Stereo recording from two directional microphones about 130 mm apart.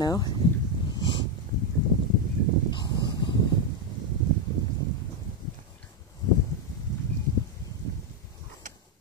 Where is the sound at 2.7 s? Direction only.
35° left (ahead or behind).